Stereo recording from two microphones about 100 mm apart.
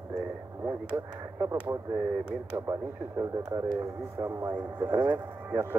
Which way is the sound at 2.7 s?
35° right (ahead or behind).